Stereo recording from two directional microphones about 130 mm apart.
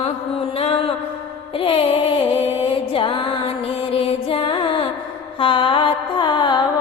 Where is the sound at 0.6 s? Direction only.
45° left (ahead or behind).